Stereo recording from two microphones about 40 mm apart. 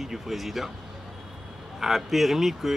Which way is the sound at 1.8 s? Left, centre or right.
Centre.